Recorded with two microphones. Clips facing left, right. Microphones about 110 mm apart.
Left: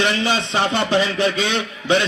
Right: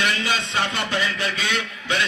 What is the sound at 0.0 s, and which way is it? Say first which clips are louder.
A man's voice: left 5 dB; 25° left (ahead or behind).